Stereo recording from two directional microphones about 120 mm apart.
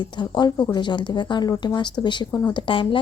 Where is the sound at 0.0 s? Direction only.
40° left (ahead or behind).